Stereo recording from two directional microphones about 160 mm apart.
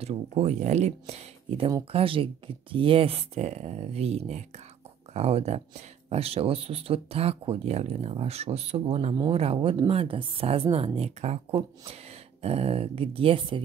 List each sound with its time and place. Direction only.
0.0 s speech: 40° right (ahead or behind)